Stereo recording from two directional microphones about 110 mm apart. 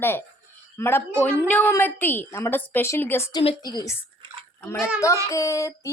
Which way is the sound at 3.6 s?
40° left (ahead or behind).